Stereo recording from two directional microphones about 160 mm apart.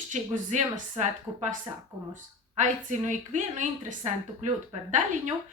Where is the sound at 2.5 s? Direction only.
50° right (ahead or behind).